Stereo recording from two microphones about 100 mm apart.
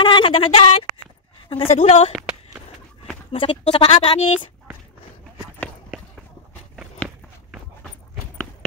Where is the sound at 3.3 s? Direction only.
65° left (ahead or behind).